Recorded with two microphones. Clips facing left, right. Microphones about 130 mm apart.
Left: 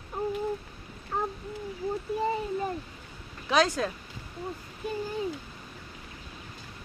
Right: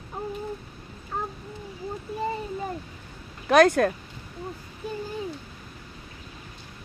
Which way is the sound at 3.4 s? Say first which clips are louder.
Right 7 dB; 55° right (ahead or behind).